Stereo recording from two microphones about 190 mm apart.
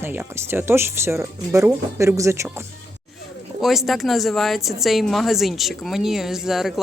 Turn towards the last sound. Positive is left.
turn(degrees=0)  # may be behind; listen again after turning